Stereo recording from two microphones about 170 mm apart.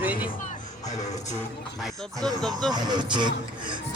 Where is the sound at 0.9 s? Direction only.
45° left (ahead or behind).